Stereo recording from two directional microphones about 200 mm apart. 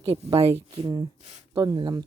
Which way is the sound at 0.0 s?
25° right (ahead or behind).